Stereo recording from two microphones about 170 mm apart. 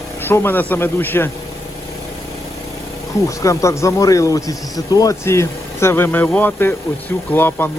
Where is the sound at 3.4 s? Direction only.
15° left (ahead or behind).